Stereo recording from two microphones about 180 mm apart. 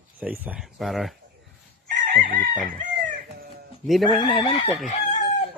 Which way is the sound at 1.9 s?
50° right (ahead or behind).